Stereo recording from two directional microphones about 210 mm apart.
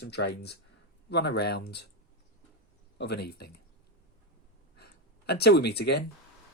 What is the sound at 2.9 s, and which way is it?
Speech, 50° left (ahead or behind).